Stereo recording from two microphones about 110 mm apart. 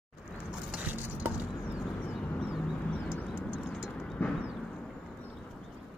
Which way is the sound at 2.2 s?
15° left (ahead or behind).